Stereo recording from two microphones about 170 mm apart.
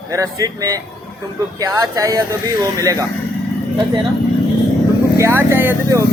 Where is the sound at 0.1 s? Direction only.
20° right (ahead or behind).